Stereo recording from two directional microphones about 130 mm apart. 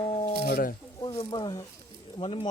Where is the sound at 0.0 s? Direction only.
45° left (ahead or behind).